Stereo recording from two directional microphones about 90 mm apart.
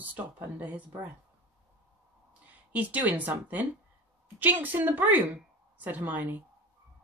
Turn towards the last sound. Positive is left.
turn(degrees=-20)  # may be behind; listen again after turning